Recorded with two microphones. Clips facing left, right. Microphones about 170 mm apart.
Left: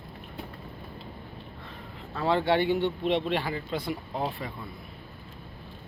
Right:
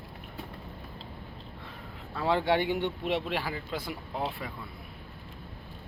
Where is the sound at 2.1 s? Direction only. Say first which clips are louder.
Left 2 dB; 10° right (ahead or behind).